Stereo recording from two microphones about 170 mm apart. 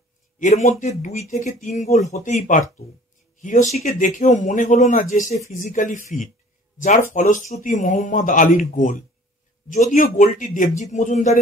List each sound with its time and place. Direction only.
0.4 s speech: 50° left (ahead or behind)